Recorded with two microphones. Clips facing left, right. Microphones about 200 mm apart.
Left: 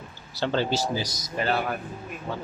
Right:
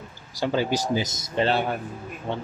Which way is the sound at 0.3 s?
10° right (ahead or behind).